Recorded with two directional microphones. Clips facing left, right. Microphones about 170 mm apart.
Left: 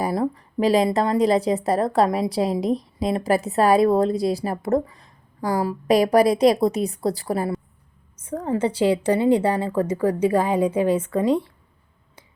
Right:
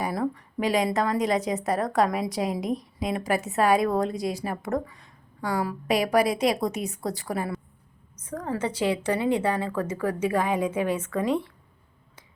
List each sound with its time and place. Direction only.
0.0 s a woman's voice: 30° left (ahead or behind)